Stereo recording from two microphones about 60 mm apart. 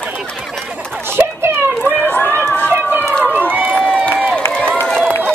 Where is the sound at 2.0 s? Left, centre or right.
Left.